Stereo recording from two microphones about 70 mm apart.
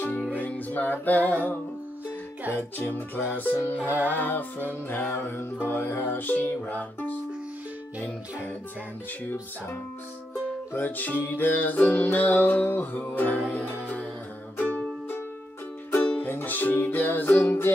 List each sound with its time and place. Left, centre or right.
0.0 s music: left
3.3 s music: left
3.8 s music: right
4.1 s music: left
10.7 s music: left
16.3 s music: left